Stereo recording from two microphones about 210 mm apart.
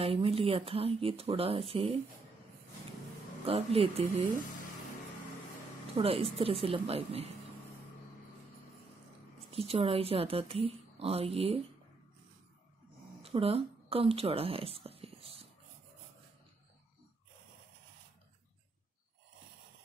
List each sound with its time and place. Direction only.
0.0 s a woman's voice: 25° right (ahead or behind)
3.4 s a woman's voice: 25° right (ahead or behind)
5.9 s a woman's voice: 25° right (ahead or behind)
9.5 s a woman's voice: 30° right (ahead or behind)
13.2 s speech: 25° right (ahead or behind)